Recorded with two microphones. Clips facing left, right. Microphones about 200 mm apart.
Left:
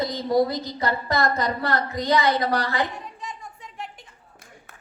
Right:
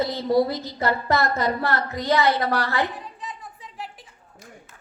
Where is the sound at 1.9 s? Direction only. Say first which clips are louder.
Right 1 dB; 15° left (ahead or behind).